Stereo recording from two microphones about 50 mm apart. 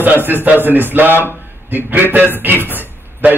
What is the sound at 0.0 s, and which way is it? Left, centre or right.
A man's voice, right.